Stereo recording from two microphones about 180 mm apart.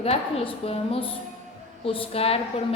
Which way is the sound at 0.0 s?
35° left (ahead or behind).